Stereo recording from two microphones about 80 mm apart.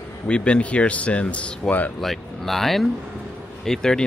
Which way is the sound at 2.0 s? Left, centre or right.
Centre.